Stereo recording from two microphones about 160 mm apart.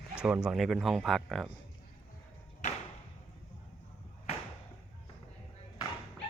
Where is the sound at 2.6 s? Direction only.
45° left (ahead or behind).